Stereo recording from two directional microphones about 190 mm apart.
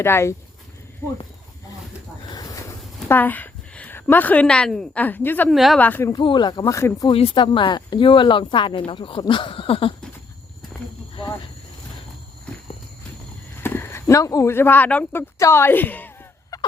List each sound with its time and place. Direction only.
0.0 s speech: 15° left (ahead or behind)
2.2 s a sound: 20° left (ahead or behind)
3.1 s a woman's voice: 10° left (ahead or behind)
6.1 s speech: 25° left (ahead or behind)
7.1 s speech: 30° left (ahead or behind)
13.6 s speech: 10° left (ahead or behind)